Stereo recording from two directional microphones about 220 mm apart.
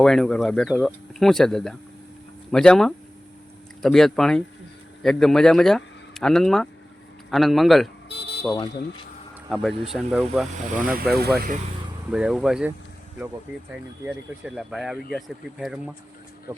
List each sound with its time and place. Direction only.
0.0 s speech: centre (ahead or behind)
8.4 s speech: 20° left (ahead or behind)
9.9 s speech: centre (ahead or behind)
10.7 s speech: 40° right (ahead or behind)
12.1 s speech: 5° right (ahead or behind)
14.0 s speech: 5° right (ahead or behind)